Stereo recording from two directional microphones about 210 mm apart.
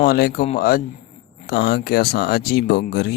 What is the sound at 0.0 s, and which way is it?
Speech, 45° left (ahead or behind).